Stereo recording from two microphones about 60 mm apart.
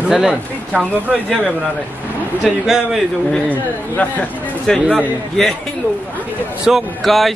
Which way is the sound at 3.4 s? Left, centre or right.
Left.